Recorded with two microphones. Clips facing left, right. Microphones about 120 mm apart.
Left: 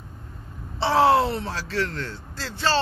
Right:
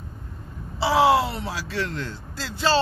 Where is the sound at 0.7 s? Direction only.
5° right (ahead or behind).